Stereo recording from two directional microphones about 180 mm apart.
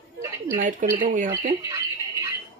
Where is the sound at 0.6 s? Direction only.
45° right (ahead or behind).